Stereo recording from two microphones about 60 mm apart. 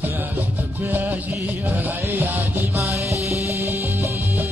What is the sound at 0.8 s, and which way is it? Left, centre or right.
Music, right.